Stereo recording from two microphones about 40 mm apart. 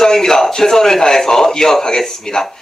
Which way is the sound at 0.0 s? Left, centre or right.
Centre.